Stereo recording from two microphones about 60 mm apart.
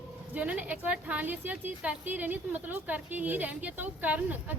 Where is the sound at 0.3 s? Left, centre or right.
Right.